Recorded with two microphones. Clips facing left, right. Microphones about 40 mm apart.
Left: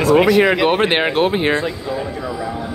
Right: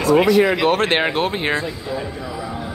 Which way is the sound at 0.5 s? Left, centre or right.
Centre.